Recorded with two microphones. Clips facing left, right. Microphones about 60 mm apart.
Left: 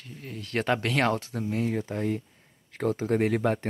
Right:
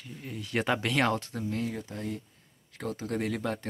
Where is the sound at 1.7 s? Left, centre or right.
Left.